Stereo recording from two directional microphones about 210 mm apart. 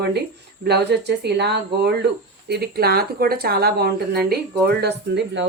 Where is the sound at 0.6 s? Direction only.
50° right (ahead or behind).